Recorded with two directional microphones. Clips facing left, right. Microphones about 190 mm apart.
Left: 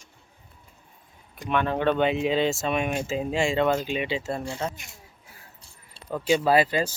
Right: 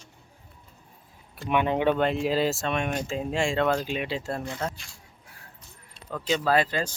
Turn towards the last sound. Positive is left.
turn(degrees=5)  # may be behind; listen again after turning